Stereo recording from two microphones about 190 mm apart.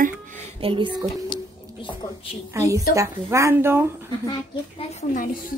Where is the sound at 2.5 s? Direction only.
15° right (ahead or behind).